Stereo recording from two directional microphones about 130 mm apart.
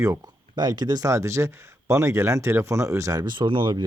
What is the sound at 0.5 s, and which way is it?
Speech, 35° right (ahead or behind).